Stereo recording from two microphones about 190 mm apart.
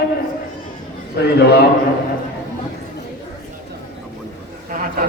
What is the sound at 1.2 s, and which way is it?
Speech, 60° left (ahead or behind).